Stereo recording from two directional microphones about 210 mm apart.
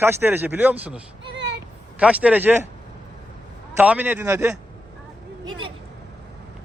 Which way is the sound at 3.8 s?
5° right (ahead or behind).